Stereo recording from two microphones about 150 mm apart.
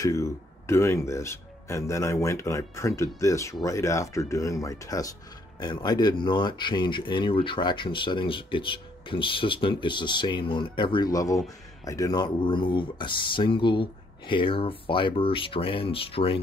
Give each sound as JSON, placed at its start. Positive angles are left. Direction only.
{"t": 0.0, "sound": "speech", "side_deg": 20}